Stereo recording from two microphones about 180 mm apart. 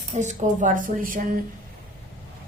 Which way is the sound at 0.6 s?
45° right (ahead or behind).